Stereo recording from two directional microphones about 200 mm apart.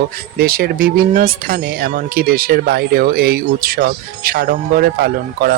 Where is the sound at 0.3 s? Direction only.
50° right (ahead or behind).